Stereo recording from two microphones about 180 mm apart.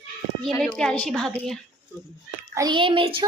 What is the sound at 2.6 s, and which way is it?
Speech, 25° right (ahead or behind).